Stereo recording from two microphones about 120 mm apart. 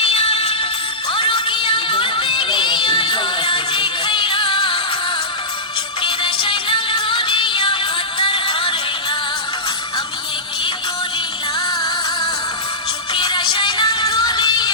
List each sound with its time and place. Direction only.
0.0 s music: 55° left (ahead or behind)
6.0 s music: 40° left (ahead or behind)
13.1 s music: 40° left (ahead or behind)